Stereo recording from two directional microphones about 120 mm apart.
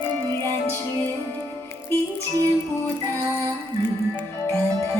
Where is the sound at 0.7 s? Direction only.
20° left (ahead or behind).